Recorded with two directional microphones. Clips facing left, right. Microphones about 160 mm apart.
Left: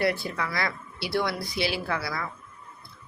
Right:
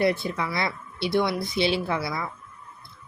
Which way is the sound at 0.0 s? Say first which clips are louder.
Right 3 dB; 20° right (ahead or behind).